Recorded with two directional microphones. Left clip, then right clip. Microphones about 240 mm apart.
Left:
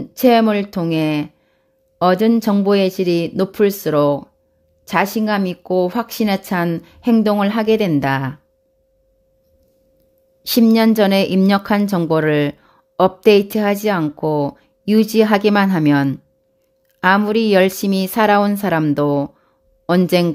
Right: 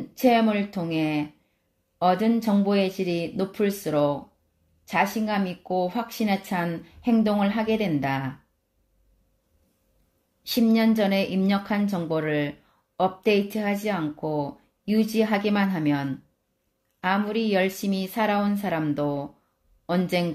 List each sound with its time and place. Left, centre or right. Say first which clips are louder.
0.1 s a woman's voice: left 8 dB; left
10.4 s a woman's voice: left 9 dB; left